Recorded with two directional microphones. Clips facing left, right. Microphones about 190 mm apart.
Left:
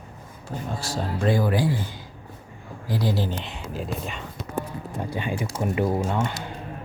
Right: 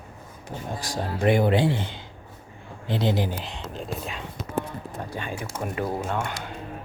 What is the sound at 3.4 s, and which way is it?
Speech, 5° left (ahead or behind).